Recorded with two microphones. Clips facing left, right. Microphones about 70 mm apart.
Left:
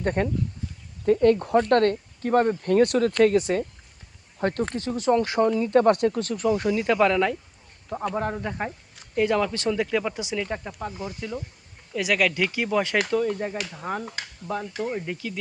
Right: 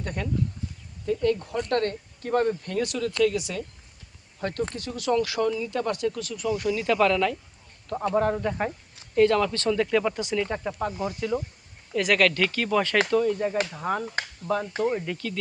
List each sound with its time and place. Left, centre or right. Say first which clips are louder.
0.0 s speech: left 5 dB; left
2.6 s speech: left 8 dB; left
7.9 s speech: right 3 dB; centre
10.7 s speech: right 5 dB; right
11.2 s speech: right 5 dB; centre
14.2 s speech: right 3 dB; right
15.0 s speech: even; centre